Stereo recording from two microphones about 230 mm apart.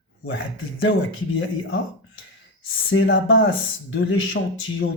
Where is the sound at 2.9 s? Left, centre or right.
Left.